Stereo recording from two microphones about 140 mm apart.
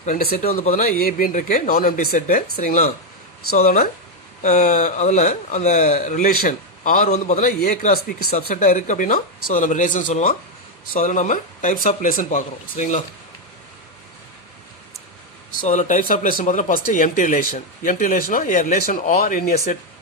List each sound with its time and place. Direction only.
0.0 s a man's voice: 75° left (ahead or behind); by 0.9 s 55° left (ahead or behind)
0.9 s speech: 90° left
4.4 s a man's voice: 60° left (ahead or behind)
15.6 s speech: 60° left (ahead or behind); by 19.5 s 90° left